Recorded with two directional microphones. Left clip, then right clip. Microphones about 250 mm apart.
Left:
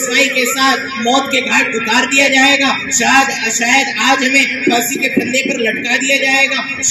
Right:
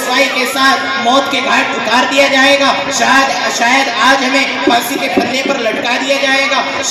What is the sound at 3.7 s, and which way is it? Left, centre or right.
Speech, left.